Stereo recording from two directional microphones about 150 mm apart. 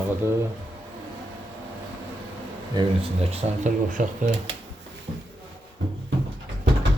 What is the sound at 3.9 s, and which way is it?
Speech, 60° right (ahead or behind).